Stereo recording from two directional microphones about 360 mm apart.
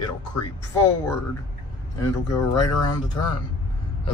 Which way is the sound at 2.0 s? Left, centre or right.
Centre.